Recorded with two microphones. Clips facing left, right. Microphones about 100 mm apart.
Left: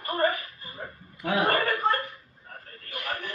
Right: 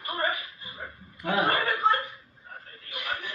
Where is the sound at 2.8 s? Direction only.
45° left (ahead or behind).